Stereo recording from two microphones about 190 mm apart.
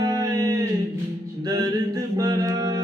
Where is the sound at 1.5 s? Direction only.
20° right (ahead or behind).